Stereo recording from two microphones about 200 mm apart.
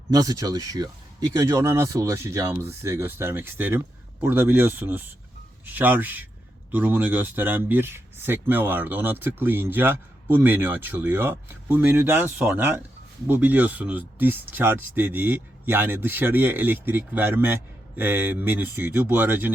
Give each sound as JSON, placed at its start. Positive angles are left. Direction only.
{"t": 0.1, "sound": "speech", "side_deg": -15}